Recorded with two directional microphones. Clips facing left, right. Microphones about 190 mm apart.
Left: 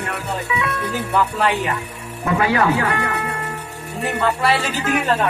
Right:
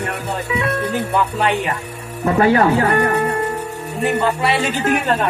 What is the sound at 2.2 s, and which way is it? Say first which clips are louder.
Speech: right 4 dB; 40° right (ahead or behind).